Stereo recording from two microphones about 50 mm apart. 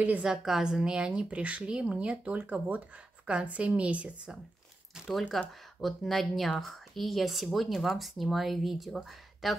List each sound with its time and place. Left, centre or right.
0.2 s a woman's voice: centre
5.3 s speech: centre